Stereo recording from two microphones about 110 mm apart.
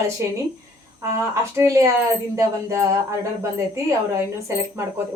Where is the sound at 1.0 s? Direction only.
25° right (ahead or behind).